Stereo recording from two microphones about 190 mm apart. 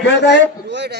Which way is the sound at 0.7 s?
65° right (ahead or behind).